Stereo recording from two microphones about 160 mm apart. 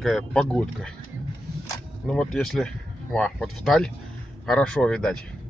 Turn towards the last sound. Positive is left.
turn(degrees=5)  # may be behind; listen again after turning